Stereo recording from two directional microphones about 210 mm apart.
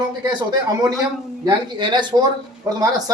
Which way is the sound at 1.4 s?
20° right (ahead or behind).